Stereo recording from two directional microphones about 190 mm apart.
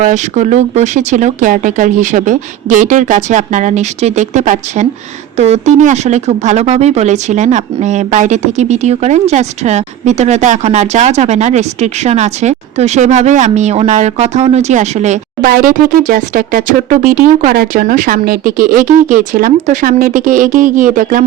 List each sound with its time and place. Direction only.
0.0 s speech: 40° right (ahead or behind)
15.4 s speech: 50° right (ahead or behind)